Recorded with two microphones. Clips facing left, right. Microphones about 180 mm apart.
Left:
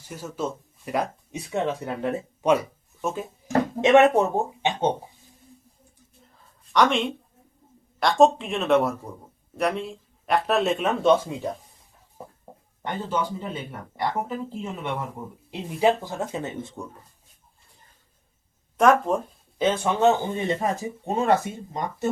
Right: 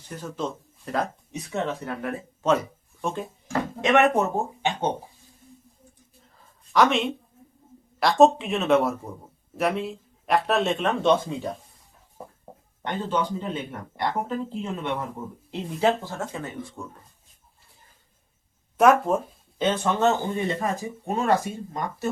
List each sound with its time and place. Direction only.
0.1 s speech: 5° left (ahead or behind); by 2.2 s 25° left (ahead or behind)
2.4 s speech: 10° left (ahead or behind)
3.8 s speech: 25° left (ahead or behind)
4.6 s a sound: 20° left (ahead or behind)
6.7 s speech: centre (ahead or behind)
12.8 s speech: 10° left (ahead or behind)
18.8 s speech: 5° right (ahead or behind)
19.5 s speech: 10° left (ahead or behind)